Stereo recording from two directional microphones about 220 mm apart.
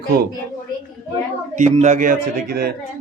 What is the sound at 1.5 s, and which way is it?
A man's voice, 35° right (ahead or behind).